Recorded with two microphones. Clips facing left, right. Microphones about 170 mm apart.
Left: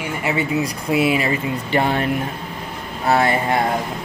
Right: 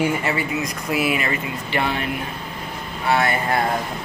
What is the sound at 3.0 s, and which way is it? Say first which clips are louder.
Speech: left 3 dB; 30° left (ahead or behind).